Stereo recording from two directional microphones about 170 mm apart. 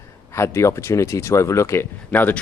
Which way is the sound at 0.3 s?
15° left (ahead or behind).